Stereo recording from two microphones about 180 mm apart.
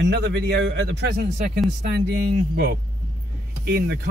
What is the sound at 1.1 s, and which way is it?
Speech, 50° right (ahead or behind).